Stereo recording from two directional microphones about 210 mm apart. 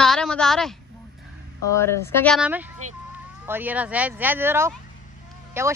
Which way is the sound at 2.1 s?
10° left (ahead or behind).